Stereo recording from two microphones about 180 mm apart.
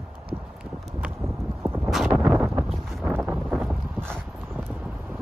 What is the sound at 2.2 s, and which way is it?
Wind noise, 10° right (ahead or behind).